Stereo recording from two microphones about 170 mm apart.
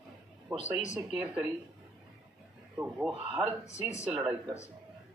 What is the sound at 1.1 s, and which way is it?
Speech, 5° right (ahead or behind).